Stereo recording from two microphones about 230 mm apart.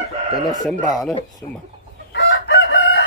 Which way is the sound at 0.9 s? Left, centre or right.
Centre.